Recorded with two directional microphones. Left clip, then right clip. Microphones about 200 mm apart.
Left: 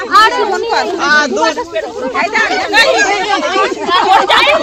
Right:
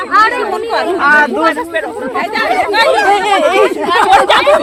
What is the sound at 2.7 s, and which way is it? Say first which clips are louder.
Speech: left 2 dB; 55° left (ahead or behind).